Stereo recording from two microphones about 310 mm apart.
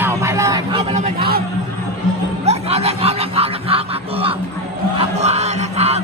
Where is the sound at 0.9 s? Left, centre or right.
Right.